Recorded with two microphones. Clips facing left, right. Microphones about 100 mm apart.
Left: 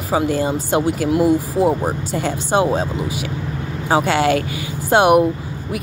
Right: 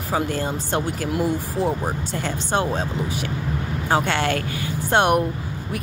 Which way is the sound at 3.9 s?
5° left (ahead or behind).